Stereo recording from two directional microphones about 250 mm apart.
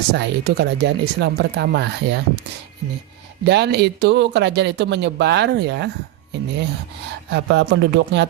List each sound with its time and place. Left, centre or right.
0.1 s speech: right
3.4 s speech: right
7.3 s speech: right